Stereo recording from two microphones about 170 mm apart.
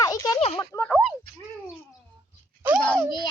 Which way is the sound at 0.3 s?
35° left (ahead or behind).